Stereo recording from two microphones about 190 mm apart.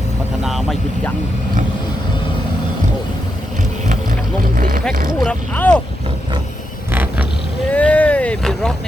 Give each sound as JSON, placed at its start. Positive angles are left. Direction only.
{"t": 0.4, "sound": "speech", "side_deg": 0}
{"t": 4.5, "sound": "speech", "side_deg": -50}
{"t": 5.2, "sound": "speech", "side_deg": 5}
{"t": 6.9, "sound": "vehicle", "side_deg": -10}
{"t": 7.7, "sound": "vehicle", "side_deg": 5}